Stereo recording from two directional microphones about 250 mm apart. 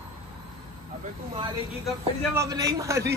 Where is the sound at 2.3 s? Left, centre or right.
Centre.